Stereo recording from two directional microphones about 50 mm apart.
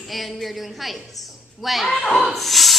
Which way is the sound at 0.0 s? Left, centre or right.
Centre.